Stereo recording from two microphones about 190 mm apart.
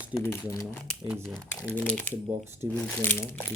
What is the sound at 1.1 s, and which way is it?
Speech, 5° right (ahead or behind).